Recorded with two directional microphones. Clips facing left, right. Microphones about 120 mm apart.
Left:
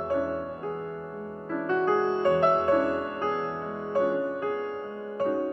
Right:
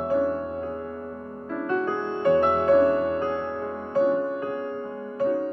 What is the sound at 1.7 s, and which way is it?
Music, 20° left (ahead or behind).